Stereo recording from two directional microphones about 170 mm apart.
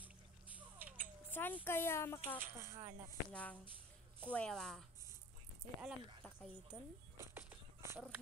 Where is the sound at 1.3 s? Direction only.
10° left (ahead or behind).